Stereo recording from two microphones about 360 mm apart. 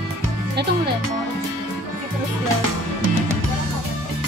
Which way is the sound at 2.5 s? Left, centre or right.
Right.